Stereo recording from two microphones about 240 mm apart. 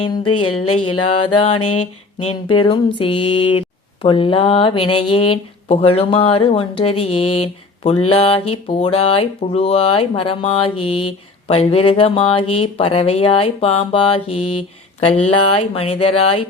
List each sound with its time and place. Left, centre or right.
0.0 s speech: centre
0.3 s a sound: left
1.8 s speech: left